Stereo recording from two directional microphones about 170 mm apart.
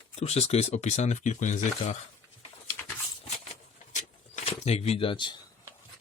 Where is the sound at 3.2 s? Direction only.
45° left (ahead or behind).